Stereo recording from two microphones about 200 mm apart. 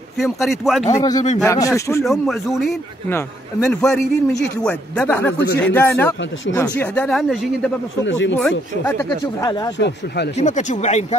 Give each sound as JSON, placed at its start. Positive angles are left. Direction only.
{"t": 0.2, "sound": "a man's voice", "side_deg": 0}
{"t": 0.8, "sound": "speech", "side_deg": 20}
{"t": 2.0, "sound": "a man's voice", "side_deg": 0}
{"t": 8.0, "sound": "speech", "side_deg": 65}
{"t": 8.4, "sound": "a man's voice", "side_deg": 0}
{"t": 8.9, "sound": "speech", "side_deg": 15}
{"t": 9.8, "sound": "speech", "side_deg": 60}
{"t": 10.3, "sound": "speech", "side_deg": 35}